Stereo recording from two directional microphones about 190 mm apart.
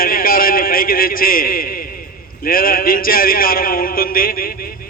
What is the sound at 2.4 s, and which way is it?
A man's voice, 50° left (ahead or behind).